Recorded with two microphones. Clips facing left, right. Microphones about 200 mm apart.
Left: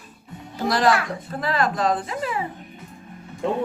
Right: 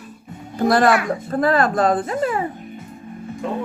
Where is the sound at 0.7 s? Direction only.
55° right (ahead or behind).